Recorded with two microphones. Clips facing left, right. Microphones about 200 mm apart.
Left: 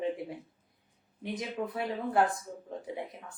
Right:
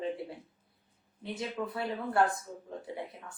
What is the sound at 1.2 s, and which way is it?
Speech, 15° left (ahead or behind).